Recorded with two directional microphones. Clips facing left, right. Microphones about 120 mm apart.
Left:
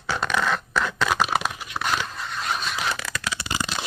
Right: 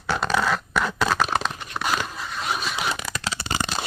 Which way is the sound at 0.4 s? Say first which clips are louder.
Right 1 dB; centre (ahead or behind).